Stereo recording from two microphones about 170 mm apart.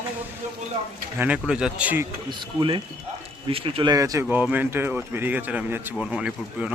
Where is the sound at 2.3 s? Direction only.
30° right (ahead or behind).